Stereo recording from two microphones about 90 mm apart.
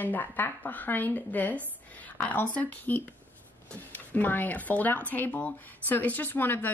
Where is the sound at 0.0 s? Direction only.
20° left (ahead or behind).